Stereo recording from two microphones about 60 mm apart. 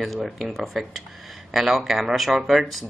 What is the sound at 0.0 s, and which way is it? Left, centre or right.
Speech, centre.